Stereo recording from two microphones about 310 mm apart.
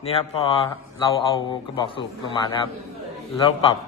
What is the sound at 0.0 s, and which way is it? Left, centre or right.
Speech, centre.